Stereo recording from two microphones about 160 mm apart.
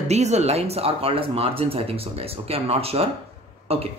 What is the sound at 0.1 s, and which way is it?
Speech, 45° right (ahead or behind).